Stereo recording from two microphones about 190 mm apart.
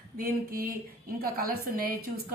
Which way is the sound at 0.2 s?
50° right (ahead or behind).